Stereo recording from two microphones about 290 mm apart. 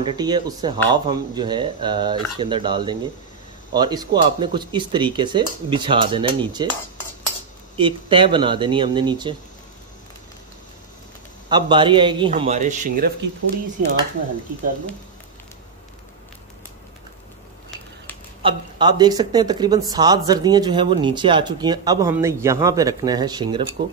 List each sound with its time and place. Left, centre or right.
0.0 s speech: centre
7.7 s speech: centre
11.4 s a man's voice: centre
18.4 s speech: centre